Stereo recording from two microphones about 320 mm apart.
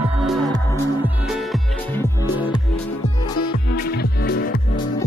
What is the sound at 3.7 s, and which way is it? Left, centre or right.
Music, left.